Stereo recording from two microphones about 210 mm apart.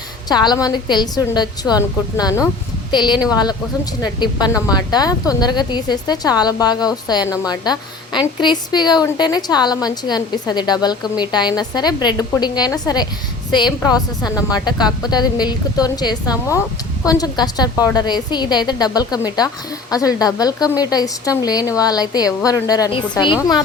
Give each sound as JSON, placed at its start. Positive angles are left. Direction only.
{"t": 0.3, "sound": "a woman's voice", "side_deg": 20}